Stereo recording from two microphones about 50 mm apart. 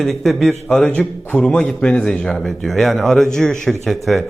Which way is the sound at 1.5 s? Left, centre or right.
Centre.